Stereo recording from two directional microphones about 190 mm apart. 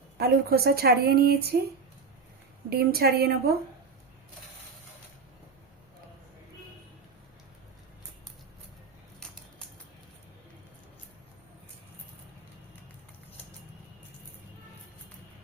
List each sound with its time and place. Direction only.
0.2 s a woman's voice: 55° right (ahead or behind)
2.6 s a woman's voice: 55° right (ahead or behind)